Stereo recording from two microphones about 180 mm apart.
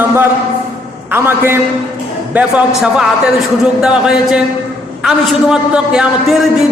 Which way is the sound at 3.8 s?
5° right (ahead or behind).